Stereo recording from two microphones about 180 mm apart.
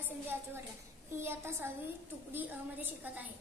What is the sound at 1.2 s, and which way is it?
Child singing, 15° right (ahead or behind).